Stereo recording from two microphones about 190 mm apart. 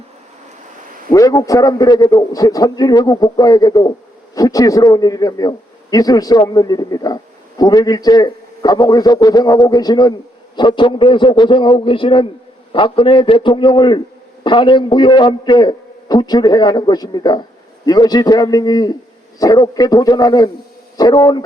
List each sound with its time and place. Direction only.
1.1 s a man's voice: 20° left (ahead or behind)